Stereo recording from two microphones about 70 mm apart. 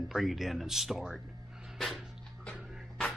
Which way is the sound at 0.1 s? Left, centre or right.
Centre.